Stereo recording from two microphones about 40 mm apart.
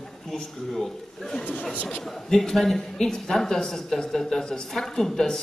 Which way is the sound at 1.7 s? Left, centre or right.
Left.